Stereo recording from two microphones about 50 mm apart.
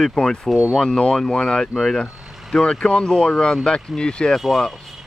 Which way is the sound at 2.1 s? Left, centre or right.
Centre.